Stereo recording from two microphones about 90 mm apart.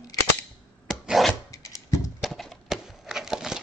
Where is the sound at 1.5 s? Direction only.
40° left (ahead or behind).